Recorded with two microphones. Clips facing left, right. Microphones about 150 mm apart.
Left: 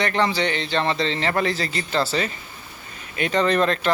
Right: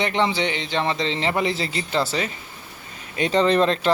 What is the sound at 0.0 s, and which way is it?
A man's voice, 20° right (ahead or behind).